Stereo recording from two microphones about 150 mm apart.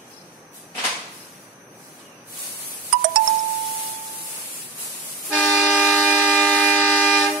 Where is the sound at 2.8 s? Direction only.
65° right (ahead or behind).